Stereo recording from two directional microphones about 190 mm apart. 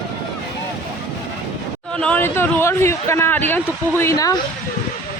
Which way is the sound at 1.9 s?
5° left (ahead or behind).